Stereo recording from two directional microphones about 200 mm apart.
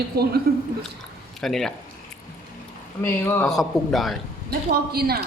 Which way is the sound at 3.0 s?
10° left (ahead or behind).